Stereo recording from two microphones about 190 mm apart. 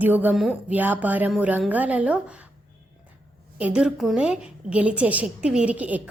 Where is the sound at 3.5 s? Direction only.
5° right (ahead or behind).